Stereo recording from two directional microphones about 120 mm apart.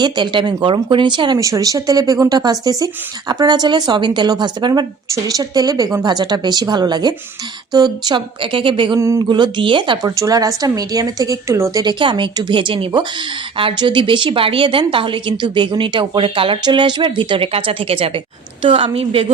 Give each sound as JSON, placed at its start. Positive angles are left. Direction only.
{"t": 0.0, "sound": "speech", "side_deg": -40}
{"t": 1.4, "sound": "speech", "side_deg": -30}
{"t": 9.0, "sound": "a sound", "side_deg": -25}
{"t": 9.3, "sound": "speech", "side_deg": -40}
{"t": 10.1, "sound": "speech", "side_deg": -30}